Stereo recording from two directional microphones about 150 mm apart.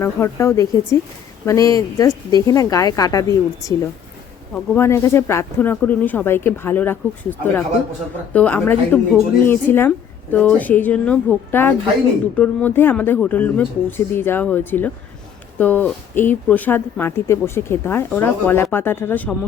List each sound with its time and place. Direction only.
0.0 s speech: 15° left (ahead or behind)
4.8 s speech: 15° left (ahead or behind)